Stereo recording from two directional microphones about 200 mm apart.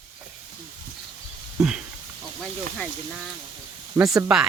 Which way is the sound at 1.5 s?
5° right (ahead or behind).